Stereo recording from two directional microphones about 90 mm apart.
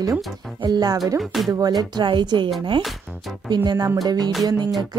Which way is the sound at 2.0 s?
60° right (ahead or behind).